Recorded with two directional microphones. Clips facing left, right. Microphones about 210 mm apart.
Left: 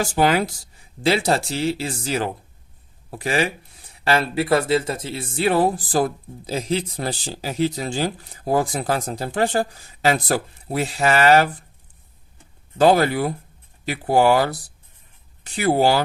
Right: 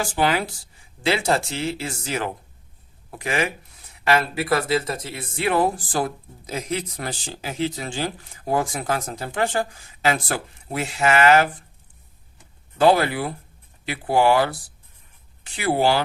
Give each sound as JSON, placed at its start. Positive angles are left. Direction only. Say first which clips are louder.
{"t": 0.0, "sound": "speech", "louder": "left 3 dB", "side_deg": 40}
{"t": 12.7, "sound": "speech", "louder": "left 2 dB", "side_deg": 40}